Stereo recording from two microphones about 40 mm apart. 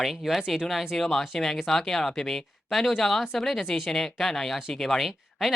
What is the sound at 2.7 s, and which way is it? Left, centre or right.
Speech, centre.